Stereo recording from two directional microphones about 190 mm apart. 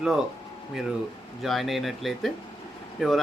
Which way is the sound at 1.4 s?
Centre (ahead or behind).